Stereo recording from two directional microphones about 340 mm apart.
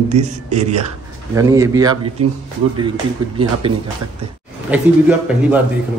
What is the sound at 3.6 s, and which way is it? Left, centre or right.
Speech, centre.